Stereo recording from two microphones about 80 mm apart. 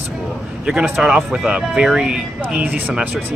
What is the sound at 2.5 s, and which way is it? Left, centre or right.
Speech, centre.